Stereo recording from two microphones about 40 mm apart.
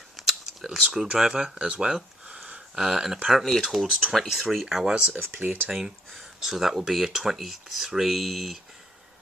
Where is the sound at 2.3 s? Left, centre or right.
Right.